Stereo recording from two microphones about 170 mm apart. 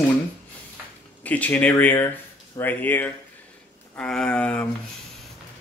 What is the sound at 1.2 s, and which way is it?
Speech, 10° left (ahead or behind).